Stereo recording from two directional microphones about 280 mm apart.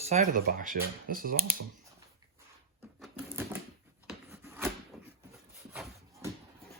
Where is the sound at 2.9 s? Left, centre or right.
Centre.